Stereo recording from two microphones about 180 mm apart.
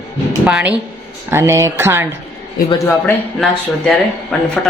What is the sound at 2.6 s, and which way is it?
Speech, 15° left (ahead or behind).